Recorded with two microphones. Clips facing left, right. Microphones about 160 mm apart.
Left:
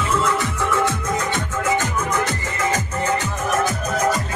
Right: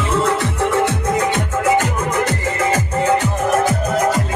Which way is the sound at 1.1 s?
65° right (ahead or behind).